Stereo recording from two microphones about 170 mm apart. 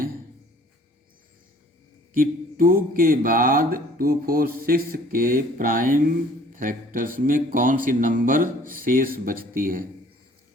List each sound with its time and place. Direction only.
2.1 s speech: 55° right (ahead or behind)